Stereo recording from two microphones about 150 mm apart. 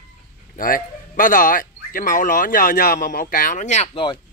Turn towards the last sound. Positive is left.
turn(degrees=50)  # may be behind; listen again after turning